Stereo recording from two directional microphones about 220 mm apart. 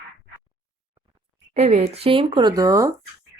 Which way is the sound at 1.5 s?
30° right (ahead or behind).